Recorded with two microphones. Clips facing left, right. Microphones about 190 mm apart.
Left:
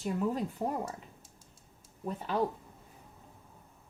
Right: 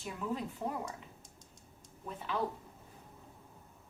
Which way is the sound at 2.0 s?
40° left (ahead or behind).